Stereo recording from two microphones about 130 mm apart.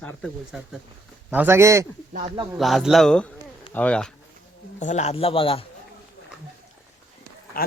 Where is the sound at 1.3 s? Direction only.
15° right (ahead or behind).